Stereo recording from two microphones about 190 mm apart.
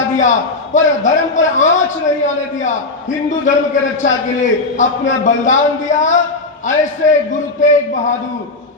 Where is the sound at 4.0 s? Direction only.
40° left (ahead or behind).